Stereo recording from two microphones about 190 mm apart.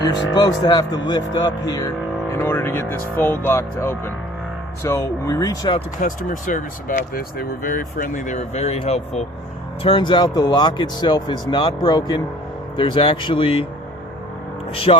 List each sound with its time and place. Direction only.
0.3 s speech: 20° left (ahead or behind)
6.0 s speech: 45° left (ahead or behind)
14.9 s speech: 30° left (ahead or behind)